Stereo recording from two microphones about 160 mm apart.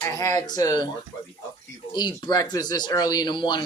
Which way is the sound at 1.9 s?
25° left (ahead or behind).